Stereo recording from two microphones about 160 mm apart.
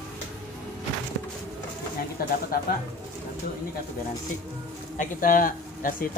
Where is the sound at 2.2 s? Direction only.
70° left (ahead or behind).